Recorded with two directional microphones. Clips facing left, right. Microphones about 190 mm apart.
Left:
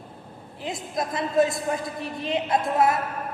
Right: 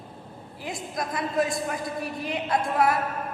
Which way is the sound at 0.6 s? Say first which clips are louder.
Left 3 dB; 25° left (ahead or behind).